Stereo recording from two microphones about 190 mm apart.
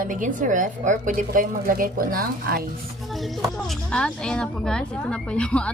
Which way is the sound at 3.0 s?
Centre (ahead or behind).